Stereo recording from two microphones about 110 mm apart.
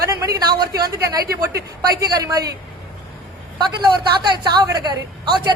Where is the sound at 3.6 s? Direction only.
40° right (ahead or behind).